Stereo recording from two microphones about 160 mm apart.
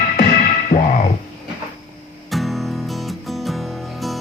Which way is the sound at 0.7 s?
60° left (ahead or behind).